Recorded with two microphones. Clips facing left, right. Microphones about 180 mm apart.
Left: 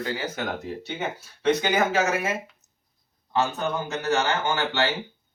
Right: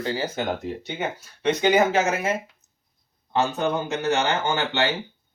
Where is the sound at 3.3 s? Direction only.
20° right (ahead or behind).